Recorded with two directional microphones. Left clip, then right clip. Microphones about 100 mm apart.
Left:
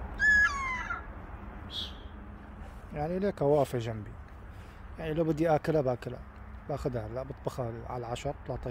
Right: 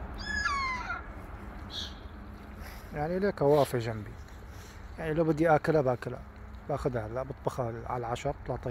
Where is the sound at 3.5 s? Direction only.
20° left (ahead or behind).